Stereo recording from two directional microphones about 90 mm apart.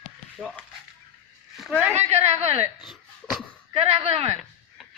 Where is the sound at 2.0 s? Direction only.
90° right.